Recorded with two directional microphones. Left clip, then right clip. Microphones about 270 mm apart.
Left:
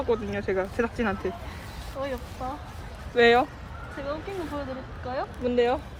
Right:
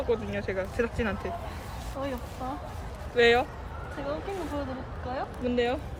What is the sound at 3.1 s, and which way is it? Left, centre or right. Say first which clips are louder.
Speech: left 3 dB; centre.